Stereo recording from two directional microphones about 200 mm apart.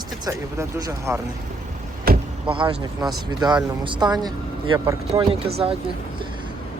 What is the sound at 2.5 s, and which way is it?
Speech, 25° right (ahead or behind).